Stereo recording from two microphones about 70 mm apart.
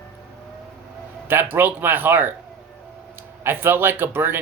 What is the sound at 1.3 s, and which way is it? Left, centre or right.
Speech, right.